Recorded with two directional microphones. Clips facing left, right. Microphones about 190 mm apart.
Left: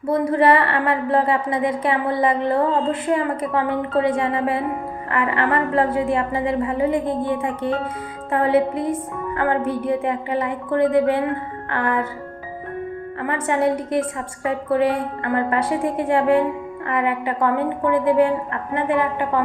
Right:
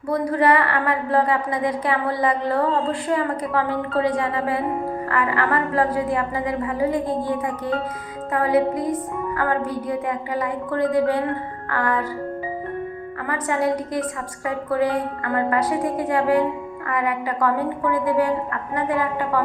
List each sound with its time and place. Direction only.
0.1 s a woman's voice: 25° left (ahead or behind)
13.2 s a woman's voice: 25° left (ahead or behind)